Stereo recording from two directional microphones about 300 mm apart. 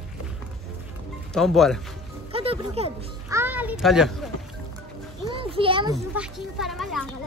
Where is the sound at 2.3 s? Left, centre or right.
Centre.